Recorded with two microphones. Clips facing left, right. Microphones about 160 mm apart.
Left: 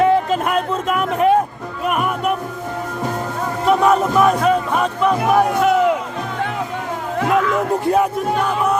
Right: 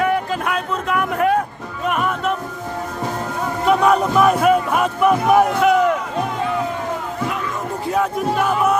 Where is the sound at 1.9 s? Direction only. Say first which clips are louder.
Left 1 dB; 10° left (ahead or behind).